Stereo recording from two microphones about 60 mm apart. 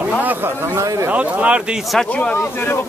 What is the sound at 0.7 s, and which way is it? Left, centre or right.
Speech, right.